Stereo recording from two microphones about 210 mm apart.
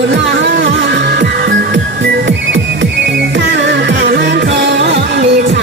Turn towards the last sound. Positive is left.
turn(degrees=-55)  # may be behind; listen again after turning